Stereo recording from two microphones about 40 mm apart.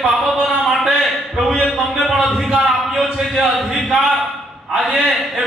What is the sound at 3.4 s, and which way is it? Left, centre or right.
A man's voice, centre.